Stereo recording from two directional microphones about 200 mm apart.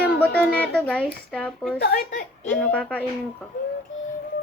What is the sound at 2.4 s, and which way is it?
Speech, 5° left (ahead or behind).